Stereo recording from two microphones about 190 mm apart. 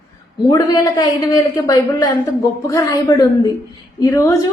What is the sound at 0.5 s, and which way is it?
Speech, 25° left (ahead or behind).